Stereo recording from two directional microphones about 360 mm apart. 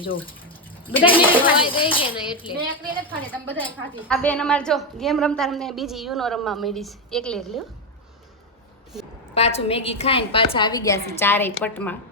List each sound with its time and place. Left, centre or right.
0.9 s a woman's voice: centre
1.4 s a woman's voice: centre
9.3 s a woman's voice: centre